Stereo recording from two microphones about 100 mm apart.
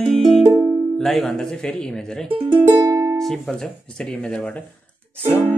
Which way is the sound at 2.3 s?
55° right (ahead or behind).